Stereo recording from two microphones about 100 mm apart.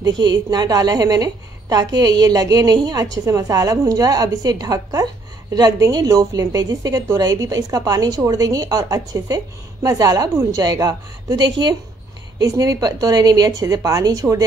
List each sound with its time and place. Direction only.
0.0 s a woman's voice: 45° right (ahead or behind)
12.4 s a woman's voice: 35° right (ahead or behind)